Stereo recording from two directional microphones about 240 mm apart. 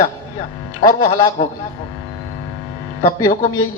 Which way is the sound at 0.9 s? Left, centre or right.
Left.